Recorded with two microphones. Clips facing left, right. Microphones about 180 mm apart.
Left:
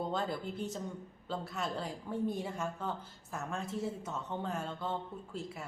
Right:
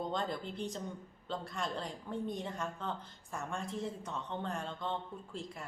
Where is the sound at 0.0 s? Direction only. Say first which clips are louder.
Left 1 dB; 5° left (ahead or behind).